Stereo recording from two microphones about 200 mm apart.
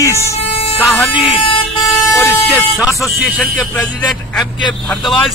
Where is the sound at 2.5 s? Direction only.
Centre (ahead or behind).